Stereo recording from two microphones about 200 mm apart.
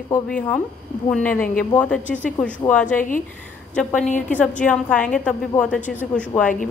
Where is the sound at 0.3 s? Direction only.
5° left (ahead or behind).